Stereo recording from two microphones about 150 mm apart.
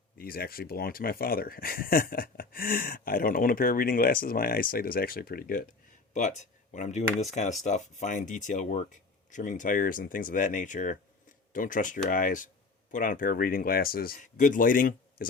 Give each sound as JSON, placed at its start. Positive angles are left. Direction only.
{"t": 0.2, "sound": "speech", "side_deg": 85}
{"t": 6.1, "sound": "speech", "side_deg": 55}
{"t": 14.2, "sound": "speech", "side_deg": 60}